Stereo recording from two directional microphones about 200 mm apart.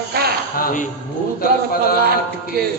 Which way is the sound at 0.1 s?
50° right (ahead or behind).